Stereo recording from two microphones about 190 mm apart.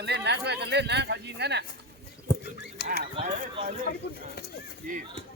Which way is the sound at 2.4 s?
55° left (ahead or behind).